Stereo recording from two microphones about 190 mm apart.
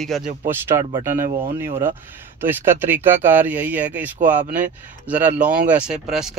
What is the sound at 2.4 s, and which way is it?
Speech, 10° right (ahead or behind).